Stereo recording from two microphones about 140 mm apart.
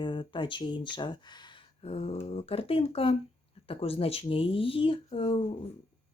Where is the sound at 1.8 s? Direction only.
50° left (ahead or behind).